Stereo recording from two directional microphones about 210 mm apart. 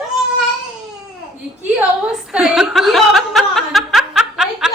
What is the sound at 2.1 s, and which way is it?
Chuckle, 5° right (ahead or behind).